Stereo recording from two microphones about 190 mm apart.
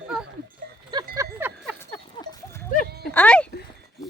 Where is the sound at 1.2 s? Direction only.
10° right (ahead or behind).